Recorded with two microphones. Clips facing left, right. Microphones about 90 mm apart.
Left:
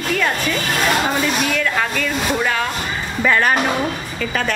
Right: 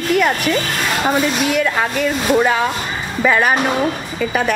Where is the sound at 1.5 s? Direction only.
15° right (ahead or behind).